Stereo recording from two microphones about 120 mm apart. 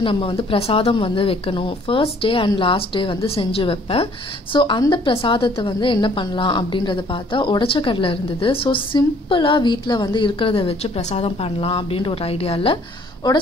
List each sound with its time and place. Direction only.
0.0 s speech: 50° left (ahead or behind)